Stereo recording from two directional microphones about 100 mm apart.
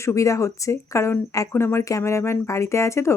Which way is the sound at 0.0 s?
30° left (ahead or behind).